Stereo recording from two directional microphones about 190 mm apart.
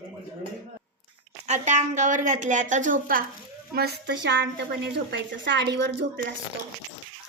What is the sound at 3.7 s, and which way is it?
A woman's voice, 60° right (ahead or behind).